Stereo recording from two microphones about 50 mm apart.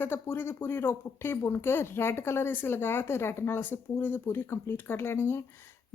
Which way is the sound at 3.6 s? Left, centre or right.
Left.